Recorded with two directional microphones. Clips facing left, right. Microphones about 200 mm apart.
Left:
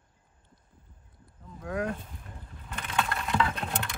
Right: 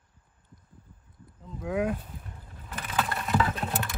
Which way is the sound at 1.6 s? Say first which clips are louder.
Right 4 dB; 10° right (ahead or behind).